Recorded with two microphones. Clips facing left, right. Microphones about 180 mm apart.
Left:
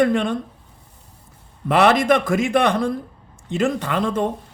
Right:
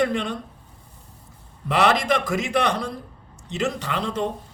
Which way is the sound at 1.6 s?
55° left (ahead or behind).